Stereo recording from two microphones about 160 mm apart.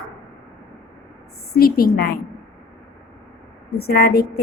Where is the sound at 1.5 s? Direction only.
70° left (ahead or behind).